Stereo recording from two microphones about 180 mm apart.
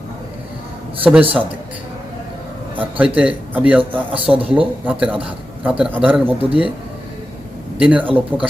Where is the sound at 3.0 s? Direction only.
5° right (ahead or behind).